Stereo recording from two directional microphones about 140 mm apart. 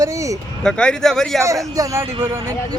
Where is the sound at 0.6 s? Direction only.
5° left (ahead or behind).